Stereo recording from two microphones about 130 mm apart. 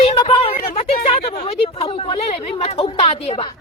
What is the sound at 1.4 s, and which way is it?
A man's voice, 50° left (ahead or behind).